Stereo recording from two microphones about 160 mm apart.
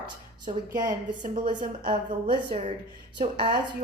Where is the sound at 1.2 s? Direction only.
55° right (ahead or behind).